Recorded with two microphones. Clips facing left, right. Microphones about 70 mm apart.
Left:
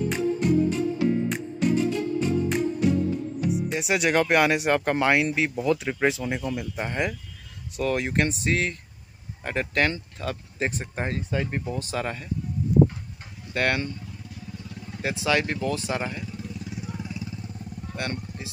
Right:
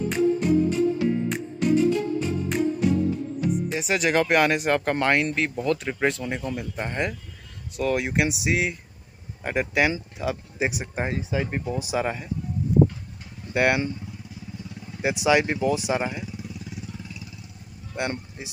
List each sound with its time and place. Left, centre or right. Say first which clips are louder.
0.1 s music: right 4 dB; centre
3.4 s speech: right 1 dB; centre
13.5 s speech: right 4 dB; centre
15.0 s speech: right 4 dB; centre
16.8 s vehicle: left 4 dB; centre
18.0 s speech: right 4 dB; centre